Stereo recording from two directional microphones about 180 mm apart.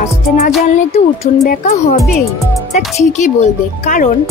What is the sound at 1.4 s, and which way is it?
Speech, 40° left (ahead or behind).